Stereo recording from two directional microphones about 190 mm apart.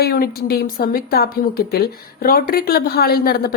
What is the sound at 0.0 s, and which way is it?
A woman's voice, 55° left (ahead or behind).